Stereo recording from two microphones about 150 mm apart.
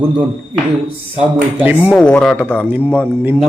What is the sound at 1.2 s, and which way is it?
Speech, 10° right (ahead or behind).